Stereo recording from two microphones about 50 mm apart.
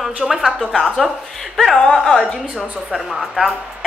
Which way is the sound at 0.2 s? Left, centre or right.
Centre.